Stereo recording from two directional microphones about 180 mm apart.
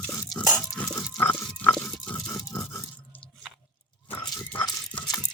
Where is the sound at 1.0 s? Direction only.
10° left (ahead or behind).